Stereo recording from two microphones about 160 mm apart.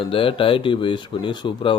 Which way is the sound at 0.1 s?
35° left (ahead or behind).